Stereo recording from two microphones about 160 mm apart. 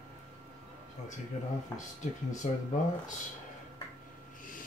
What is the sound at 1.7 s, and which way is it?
Speech, 20° left (ahead or behind).